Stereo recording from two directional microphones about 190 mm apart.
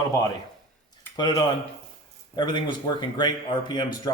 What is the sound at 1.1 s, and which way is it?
Speech, 20° left (ahead or behind).